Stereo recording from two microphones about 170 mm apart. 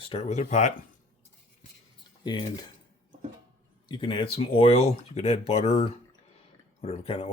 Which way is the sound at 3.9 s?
30° left (ahead or behind).